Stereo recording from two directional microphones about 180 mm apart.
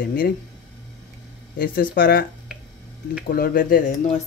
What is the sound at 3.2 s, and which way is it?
Speech, 55° left (ahead or behind).